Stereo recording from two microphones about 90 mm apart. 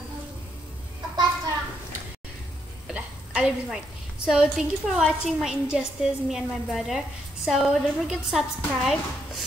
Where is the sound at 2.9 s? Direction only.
10° right (ahead or behind).